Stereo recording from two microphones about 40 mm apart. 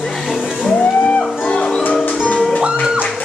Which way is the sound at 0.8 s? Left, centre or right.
Left.